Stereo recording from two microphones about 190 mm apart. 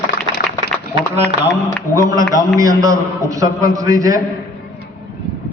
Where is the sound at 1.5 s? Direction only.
15° left (ahead or behind).